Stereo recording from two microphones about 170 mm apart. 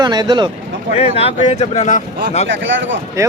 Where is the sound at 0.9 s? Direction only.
40° left (ahead or behind).